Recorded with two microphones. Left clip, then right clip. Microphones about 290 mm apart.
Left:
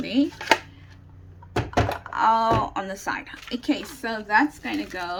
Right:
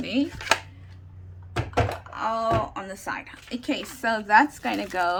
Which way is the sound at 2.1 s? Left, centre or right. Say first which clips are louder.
Left 9 dB; centre.